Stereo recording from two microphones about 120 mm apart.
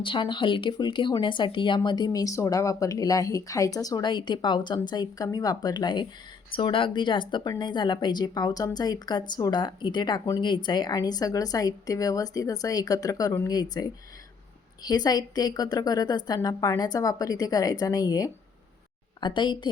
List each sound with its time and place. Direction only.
0.0 s speech: 40° left (ahead or behind)